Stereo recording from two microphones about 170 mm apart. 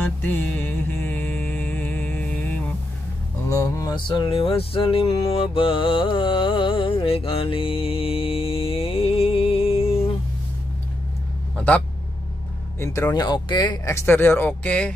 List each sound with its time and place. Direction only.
0.0 s music: 10° left (ahead or behind); by 10.0 s 35° left (ahead or behind)
11.5 s a sound: 5° left (ahead or behind)
12.7 s speech: 15° left (ahead or behind)